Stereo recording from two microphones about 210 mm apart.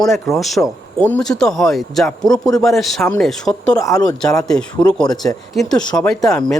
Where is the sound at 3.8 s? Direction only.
15° left (ahead or behind).